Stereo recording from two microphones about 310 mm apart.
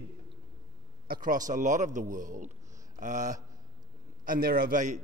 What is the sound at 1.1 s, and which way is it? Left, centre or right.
A man's voice, right.